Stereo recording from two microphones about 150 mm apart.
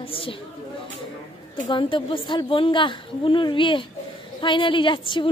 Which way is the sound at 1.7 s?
35° left (ahead or behind).